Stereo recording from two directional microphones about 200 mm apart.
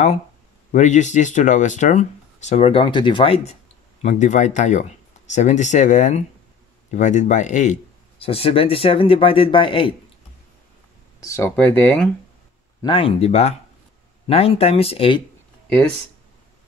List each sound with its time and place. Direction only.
0.7 s speech: 35° left (ahead or behind)
4.0 s speech: 35° left (ahead or behind)
11.1 s speech: 15° left (ahead or behind)
12.8 s speech: 25° left (ahead or behind)